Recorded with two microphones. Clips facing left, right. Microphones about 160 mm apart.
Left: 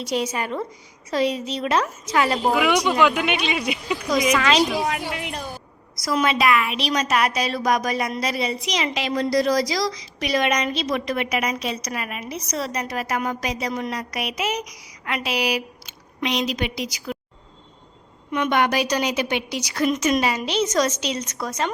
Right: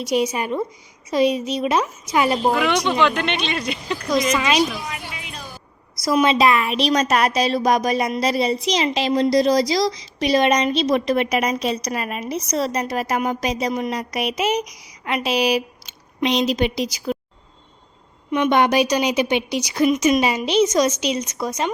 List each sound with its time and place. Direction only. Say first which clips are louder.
0.0 s a woman's voice: right 4 dB; 10° right (ahead or behind)
2.5 s speech: even; 5° left (ahead or behind)
4.4 s a woman's voice: even; 15° right (ahead or behind)
5.0 s music: left 6 dB; 60° left (ahead or behind)
6.1 s a woman's voice: right 4 dB; 25° right (ahead or behind)
18.3 s a woman's voice: right 4 dB; 20° right (ahead or behind)